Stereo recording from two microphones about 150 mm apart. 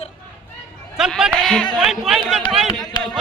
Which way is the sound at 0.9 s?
5° right (ahead or behind).